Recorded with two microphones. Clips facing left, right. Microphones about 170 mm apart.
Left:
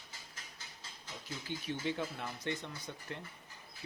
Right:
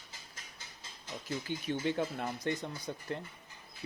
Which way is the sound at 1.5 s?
55° right (ahead or behind).